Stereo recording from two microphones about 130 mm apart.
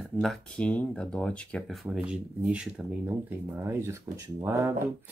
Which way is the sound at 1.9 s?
10° right (ahead or behind).